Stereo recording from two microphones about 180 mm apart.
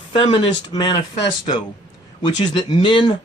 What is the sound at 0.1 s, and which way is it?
Speech, 30° left (ahead or behind).